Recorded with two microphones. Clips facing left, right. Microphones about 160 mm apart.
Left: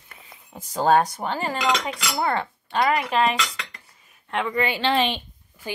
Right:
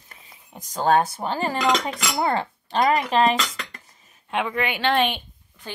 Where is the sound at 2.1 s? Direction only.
30° right (ahead or behind).